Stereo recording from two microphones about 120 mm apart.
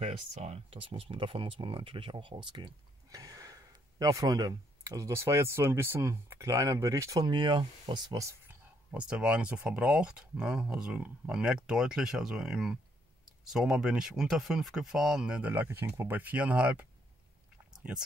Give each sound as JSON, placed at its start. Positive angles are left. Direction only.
{"t": 0.0, "sound": "speech", "side_deg": -65}
{"t": 8.9, "sound": "speech", "side_deg": -10}